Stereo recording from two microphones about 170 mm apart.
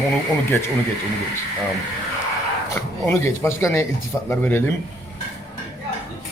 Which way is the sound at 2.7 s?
15° left (ahead or behind).